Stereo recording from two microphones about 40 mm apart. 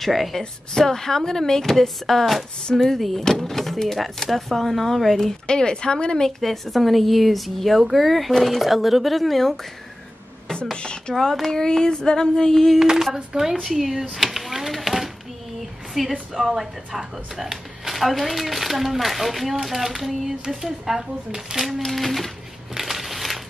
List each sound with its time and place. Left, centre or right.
0.0 s speech: centre
5.5 s a woman's voice: centre
6.4 s speech: centre
8.6 s speech: centre
10.6 s a woman's voice: left
12.7 s speech: centre
14.1 s a sound: centre
16.0 s speech: centre
21.6 s speech: centre
22.8 s crushing: centre